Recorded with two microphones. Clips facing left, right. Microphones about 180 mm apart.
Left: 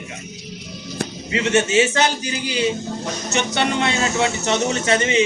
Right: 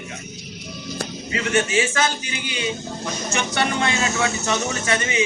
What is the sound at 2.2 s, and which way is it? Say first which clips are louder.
Speech: left 6 dB; 35° left (ahead or behind).